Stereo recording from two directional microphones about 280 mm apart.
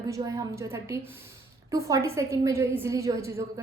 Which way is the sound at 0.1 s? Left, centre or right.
Centre.